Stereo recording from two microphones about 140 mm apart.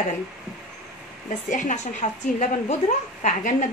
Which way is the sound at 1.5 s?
60° left (ahead or behind).